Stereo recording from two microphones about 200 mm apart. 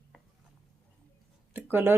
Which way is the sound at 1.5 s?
10° right (ahead or behind).